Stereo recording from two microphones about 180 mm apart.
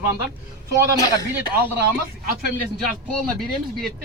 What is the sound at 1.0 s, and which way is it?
Speech, 20° left (ahead or behind).